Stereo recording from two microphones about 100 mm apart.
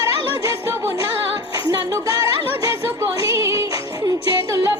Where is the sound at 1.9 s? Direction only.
35° right (ahead or behind).